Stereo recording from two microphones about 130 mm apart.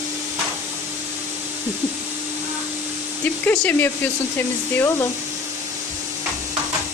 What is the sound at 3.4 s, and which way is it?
Speech, 10° left (ahead or behind).